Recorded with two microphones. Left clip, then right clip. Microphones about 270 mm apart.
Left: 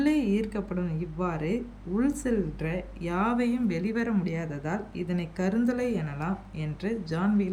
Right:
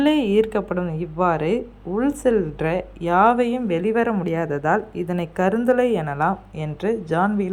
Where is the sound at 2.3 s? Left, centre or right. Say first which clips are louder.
Right 10 dB; right.